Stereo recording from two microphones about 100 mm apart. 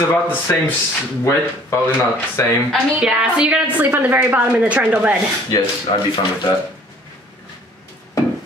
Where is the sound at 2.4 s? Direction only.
25° left (ahead or behind).